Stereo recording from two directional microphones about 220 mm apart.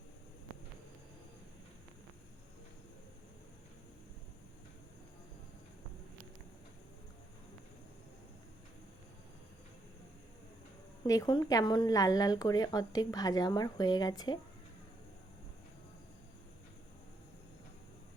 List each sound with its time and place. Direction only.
11.0 s speech: 15° left (ahead or behind)